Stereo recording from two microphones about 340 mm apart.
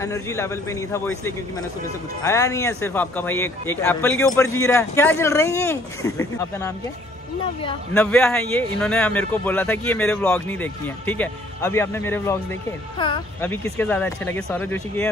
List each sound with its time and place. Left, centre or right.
0.0 s a man's voice: centre